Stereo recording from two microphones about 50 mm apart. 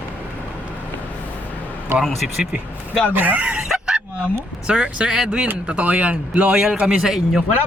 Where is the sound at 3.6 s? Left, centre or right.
Centre.